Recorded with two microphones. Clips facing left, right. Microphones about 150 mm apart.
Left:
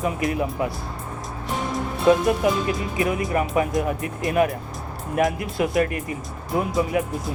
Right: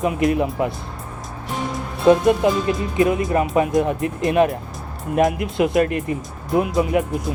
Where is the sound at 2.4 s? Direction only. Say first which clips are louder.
Right 3 dB; 25° right (ahead or behind).